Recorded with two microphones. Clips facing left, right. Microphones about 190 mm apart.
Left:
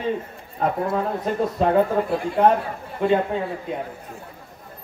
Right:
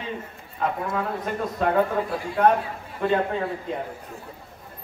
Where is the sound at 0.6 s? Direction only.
30° left (ahead or behind).